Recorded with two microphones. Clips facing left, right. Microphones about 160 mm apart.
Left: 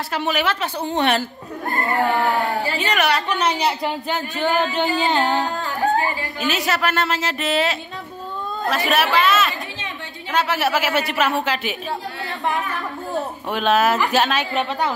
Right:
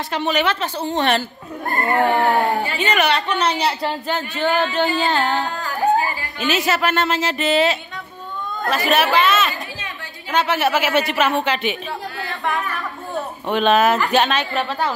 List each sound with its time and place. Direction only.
0.1 s a woman's voice: 5° left (ahead or behind)
2.0 s speech: 40° right (ahead or behind)
2.8 s a woman's voice: centre (ahead or behind)
3.3 s speech: 15° left (ahead or behind)
6.4 s a woman's voice: centre (ahead or behind)
13.5 s a woman's voice: 5° left (ahead or behind)
14.4 s speech: 20° left (ahead or behind)